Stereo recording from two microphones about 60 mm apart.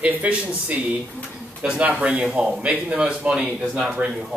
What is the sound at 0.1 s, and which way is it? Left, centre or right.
A man's voice, right.